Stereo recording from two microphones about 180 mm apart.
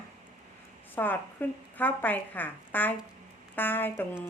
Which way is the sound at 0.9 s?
10° left (ahead or behind).